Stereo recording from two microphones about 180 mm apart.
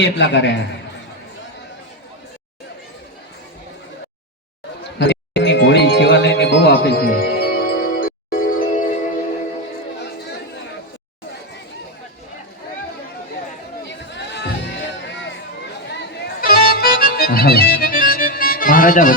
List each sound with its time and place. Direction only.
0.0 s a man's voice: 85° left
4.9 s music: 75° left (ahead or behind); by 9.0 s 45° left (ahead or behind)
13.8 s a sound: 80° left
15.9 s accordion: 65° left (ahead or behind); by 19.1 s 50° left (ahead or behind)